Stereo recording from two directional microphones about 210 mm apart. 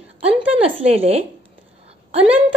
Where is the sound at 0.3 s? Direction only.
25° right (ahead or behind).